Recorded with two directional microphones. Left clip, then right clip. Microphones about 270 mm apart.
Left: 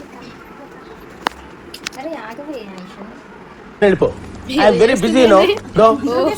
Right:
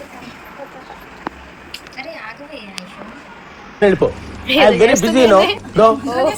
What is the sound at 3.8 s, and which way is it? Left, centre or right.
A woman's voice, centre.